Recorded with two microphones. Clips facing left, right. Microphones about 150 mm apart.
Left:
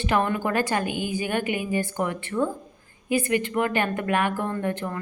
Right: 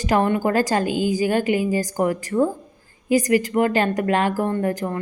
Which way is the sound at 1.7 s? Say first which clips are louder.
Right 5 dB; 35° right (ahead or behind).